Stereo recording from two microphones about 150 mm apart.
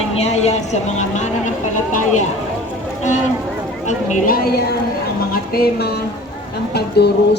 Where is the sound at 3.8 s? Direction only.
55° left (ahead or behind).